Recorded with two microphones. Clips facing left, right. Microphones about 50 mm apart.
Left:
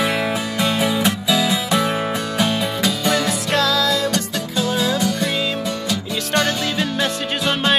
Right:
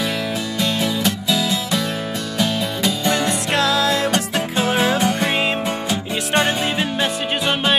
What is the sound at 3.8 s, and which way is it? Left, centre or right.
Music, right.